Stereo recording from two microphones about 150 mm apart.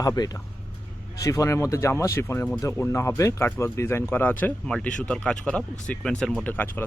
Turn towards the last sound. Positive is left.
turn(degrees=10)  # may be behind; listen again after turning